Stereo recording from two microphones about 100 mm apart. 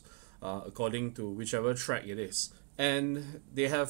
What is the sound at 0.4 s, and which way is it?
Speech, 25° right (ahead or behind).